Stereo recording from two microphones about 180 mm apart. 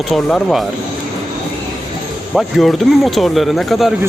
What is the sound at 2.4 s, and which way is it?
Speech, centre (ahead or behind).